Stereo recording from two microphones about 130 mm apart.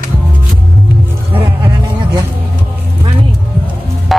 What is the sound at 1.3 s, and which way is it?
Music, 15° right (ahead or behind).